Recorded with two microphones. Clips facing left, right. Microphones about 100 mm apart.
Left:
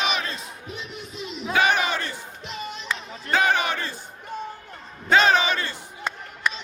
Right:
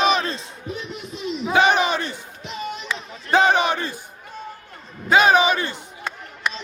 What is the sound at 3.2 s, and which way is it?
Crowd, 20° right (ahead or behind).